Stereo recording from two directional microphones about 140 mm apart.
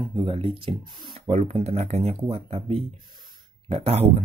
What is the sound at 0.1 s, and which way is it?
Speech, 40° right (ahead or behind).